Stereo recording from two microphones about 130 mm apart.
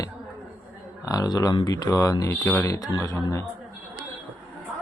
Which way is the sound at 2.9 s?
25° left (ahead or behind).